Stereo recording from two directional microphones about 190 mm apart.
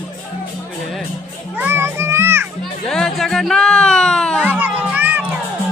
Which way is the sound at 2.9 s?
Centre (ahead or behind).